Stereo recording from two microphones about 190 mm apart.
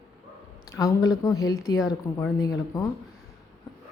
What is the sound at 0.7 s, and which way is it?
A woman's voice, 20° left (ahead or behind).